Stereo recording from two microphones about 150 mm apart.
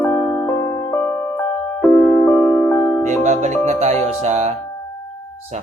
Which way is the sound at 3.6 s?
45° right (ahead or behind).